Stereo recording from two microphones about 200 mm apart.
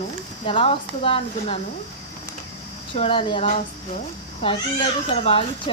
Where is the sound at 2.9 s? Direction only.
30° left (ahead or behind).